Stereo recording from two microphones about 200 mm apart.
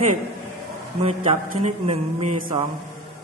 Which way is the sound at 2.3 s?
40° right (ahead or behind).